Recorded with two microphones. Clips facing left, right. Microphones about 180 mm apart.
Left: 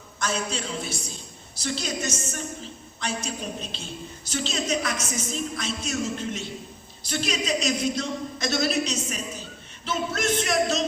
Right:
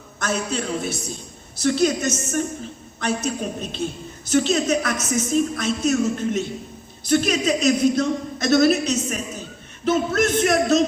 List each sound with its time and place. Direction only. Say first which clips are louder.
0.2 s a woman's voice: right 4 dB; 55° right (ahead or behind)